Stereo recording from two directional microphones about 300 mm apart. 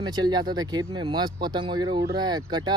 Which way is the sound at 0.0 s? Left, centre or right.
Centre.